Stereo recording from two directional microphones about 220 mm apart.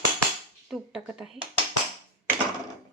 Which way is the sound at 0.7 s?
5° right (ahead or behind).